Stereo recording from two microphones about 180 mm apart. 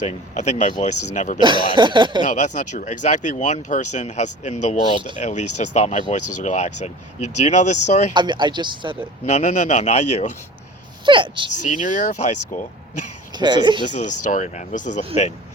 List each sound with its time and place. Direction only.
0.0 s speech: 40° left (ahead or behind)
1.4 s speech: 25° right (ahead or behind)
2.2 s speech: 45° left (ahead or behind)
8.1 s speech: 25° right (ahead or behind)
9.2 s speech: 40° left (ahead or behind)
11.0 s speech: 25° right (ahead or behind)
11.7 s speech: 45° left (ahead or behind)
13.3 s speech: 25° right (ahead or behind)
13.8 s speech: 45° left (ahead or behind)